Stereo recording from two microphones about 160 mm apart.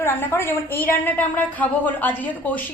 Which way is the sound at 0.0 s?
15° left (ahead or behind).